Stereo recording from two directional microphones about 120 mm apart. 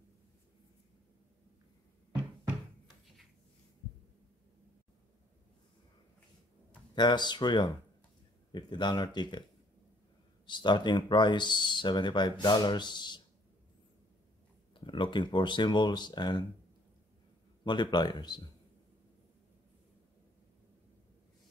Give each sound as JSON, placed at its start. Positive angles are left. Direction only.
{"t": 7.0, "sound": "speech", "side_deg": 35}
{"t": 10.4, "sound": "speech", "side_deg": 40}
{"t": 14.7, "sound": "speech", "side_deg": 40}
{"t": 17.6, "sound": "speech", "side_deg": 40}